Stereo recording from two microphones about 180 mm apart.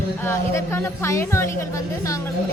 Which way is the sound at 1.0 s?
15° left (ahead or behind).